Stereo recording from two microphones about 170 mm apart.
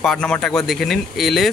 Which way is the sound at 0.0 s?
5° left (ahead or behind).